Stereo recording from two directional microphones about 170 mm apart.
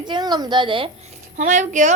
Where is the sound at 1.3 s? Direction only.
45° right (ahead or behind).